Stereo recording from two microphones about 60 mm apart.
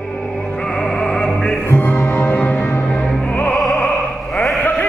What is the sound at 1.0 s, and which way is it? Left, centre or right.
Music, centre.